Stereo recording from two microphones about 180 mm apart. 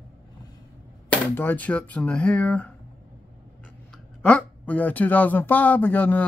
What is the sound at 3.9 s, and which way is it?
Speech, 5° left (ahead or behind).